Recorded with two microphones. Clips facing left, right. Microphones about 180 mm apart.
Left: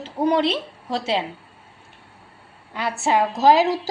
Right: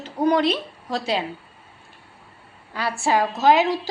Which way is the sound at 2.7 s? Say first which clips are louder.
Left 1 dB; 20° left (ahead or behind).